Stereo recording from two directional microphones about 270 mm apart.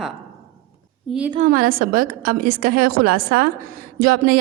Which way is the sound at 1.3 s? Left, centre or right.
Right.